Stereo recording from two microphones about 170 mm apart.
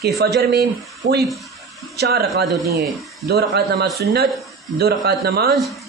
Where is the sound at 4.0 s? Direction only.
70° right (ahead or behind).